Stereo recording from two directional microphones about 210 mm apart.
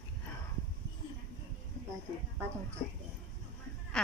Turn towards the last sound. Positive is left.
turn(degrees=5)  # may be behind; listen again after turning